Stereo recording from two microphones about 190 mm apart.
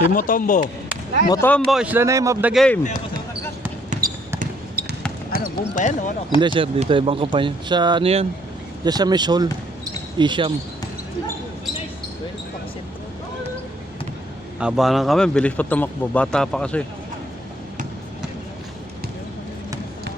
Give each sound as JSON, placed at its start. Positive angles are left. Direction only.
{"t": 0.1, "sound": "speech", "side_deg": 45}
{"t": 1.3, "sound": "speech", "side_deg": 10}
{"t": 2.5, "sound": "speech", "side_deg": 5}
{"t": 4.4, "sound": "basketball bounce", "side_deg": -50}
{"t": 5.4, "sound": "speech", "side_deg": 45}
{"t": 6.4, "sound": "speech", "side_deg": -25}
{"t": 8.8, "sound": "speech", "side_deg": -20}
{"t": 14.6, "sound": "speech", "side_deg": -5}